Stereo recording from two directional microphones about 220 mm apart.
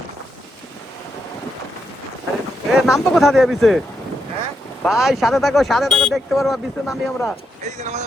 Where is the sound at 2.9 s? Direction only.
Centre (ahead or behind).